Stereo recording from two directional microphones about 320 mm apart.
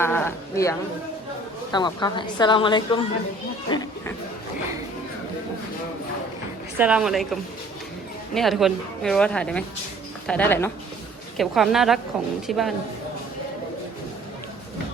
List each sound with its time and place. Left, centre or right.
0.0 s a woman's voice: centre
3.7 s chatter: centre
6.7 s speech: centre